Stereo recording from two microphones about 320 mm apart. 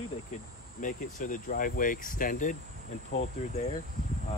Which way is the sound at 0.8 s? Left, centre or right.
Left.